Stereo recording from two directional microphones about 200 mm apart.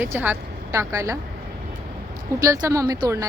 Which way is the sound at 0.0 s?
10° right (ahead or behind).